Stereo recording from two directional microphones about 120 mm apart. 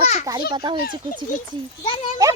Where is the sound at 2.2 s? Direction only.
30° right (ahead or behind).